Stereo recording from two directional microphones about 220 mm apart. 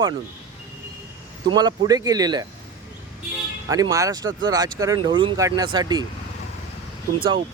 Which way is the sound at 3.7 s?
15° right (ahead or behind).